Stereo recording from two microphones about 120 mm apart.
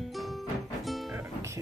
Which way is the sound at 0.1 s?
Centre (ahead or behind).